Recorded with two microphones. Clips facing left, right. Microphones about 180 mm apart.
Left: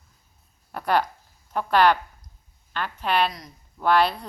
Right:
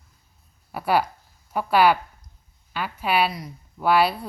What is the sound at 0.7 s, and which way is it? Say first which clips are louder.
A woman's voice: right 1 dB; 5° right (ahead or behind).